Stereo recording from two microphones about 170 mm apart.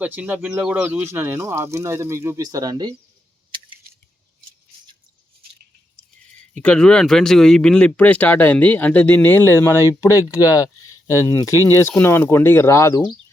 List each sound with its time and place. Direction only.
0.0 s speech: 10° right (ahead or behind)
6.5 s speech: 5° left (ahead or behind)